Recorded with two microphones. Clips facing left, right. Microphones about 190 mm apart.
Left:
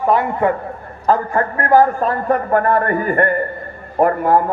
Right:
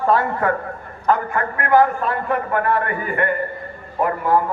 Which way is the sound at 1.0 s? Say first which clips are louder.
Left 3 dB; 35° left (ahead or behind).